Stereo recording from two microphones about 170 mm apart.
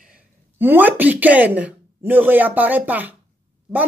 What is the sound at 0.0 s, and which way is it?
A woman's voice, 10° right (ahead or behind).